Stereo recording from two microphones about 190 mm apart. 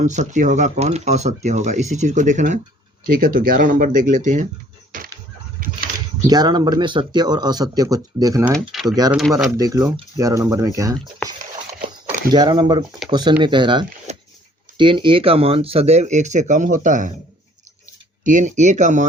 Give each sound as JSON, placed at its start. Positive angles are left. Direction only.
{"t": 0.0, "sound": "speech", "side_deg": -40}
{"t": 4.9, "sound": "a sound", "side_deg": -45}
{"t": 6.2, "sound": "speech", "side_deg": -20}
{"t": 12.3, "sound": "speech", "side_deg": -20}
{"t": 18.2, "sound": "speech", "side_deg": -40}